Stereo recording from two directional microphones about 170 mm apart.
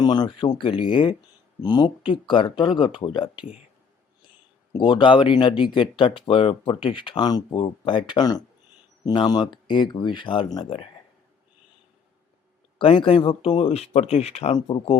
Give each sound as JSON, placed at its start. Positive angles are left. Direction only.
{"t": 0.0, "sound": "speech", "side_deg": 25}
{"t": 4.7, "sound": "speech", "side_deg": 30}
{"t": 12.8, "sound": "speech", "side_deg": 30}